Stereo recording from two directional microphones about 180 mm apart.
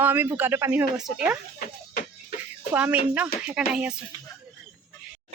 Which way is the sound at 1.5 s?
55° left (ahead or behind).